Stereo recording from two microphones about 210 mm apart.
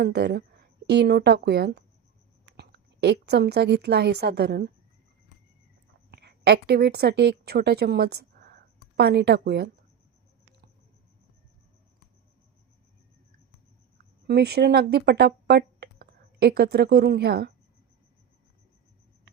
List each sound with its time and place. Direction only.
0.0 s a woman's voice: 50° right (ahead or behind)
6.1 s a woman's voice: 50° right (ahead or behind)
14.3 s speech: 50° right (ahead or behind)